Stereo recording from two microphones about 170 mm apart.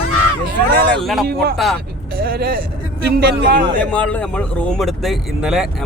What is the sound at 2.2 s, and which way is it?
A man's voice, 65° right (ahead or behind).